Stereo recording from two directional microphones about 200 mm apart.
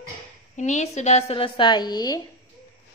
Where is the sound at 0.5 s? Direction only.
35° left (ahead or behind); by 2.2 s 20° left (ahead or behind).